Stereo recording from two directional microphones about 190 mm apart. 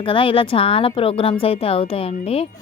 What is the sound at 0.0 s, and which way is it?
A woman's voice, 25° left (ahead or behind).